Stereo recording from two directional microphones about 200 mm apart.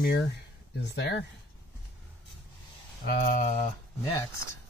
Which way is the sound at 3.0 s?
45° left (ahead or behind).